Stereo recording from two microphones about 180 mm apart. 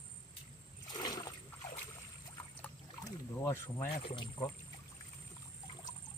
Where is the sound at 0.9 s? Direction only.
20° left (ahead or behind).